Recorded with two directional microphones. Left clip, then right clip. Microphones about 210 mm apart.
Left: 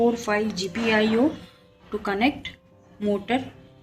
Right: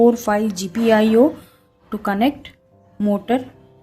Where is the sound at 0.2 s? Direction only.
60° right (ahead or behind).